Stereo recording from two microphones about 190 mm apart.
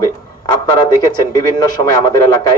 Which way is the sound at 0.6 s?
20° left (ahead or behind).